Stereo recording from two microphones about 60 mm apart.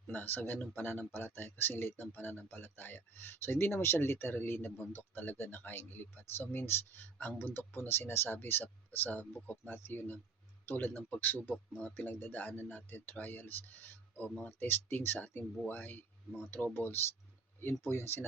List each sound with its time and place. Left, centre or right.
0.1 s speech: left
16.6 s speech: left
16.8 s speech: left